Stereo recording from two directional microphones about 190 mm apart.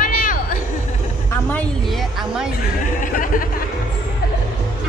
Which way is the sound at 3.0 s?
45° left (ahead or behind).